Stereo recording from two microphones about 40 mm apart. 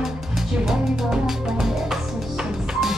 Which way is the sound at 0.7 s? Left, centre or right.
Centre.